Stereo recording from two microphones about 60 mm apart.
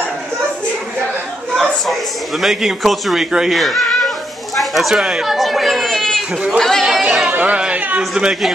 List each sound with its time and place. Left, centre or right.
1.5 s a sound: centre
2.4 s a man's voice: centre
3.3 s speech: centre
3.5 s speech: centre
6.9 s speech: centre
7.3 s speech: right